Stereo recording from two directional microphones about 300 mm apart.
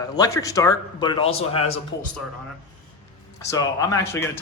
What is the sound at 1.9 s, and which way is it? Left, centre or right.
Speech, left.